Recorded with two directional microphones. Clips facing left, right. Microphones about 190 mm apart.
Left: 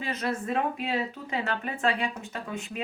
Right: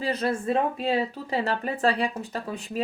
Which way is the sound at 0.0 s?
30° right (ahead or behind).